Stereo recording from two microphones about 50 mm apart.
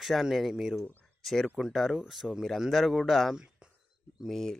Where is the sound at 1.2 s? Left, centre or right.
Centre.